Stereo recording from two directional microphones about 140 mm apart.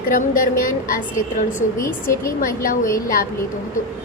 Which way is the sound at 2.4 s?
90° left.